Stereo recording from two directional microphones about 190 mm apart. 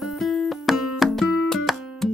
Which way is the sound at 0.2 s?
Centre (ahead or behind).